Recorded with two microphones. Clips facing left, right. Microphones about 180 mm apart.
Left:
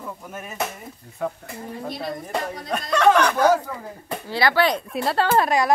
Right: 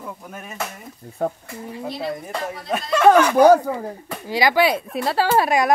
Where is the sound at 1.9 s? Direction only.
5° right (ahead or behind).